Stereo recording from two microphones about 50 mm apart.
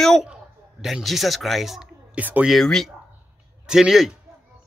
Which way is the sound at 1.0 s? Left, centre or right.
Centre.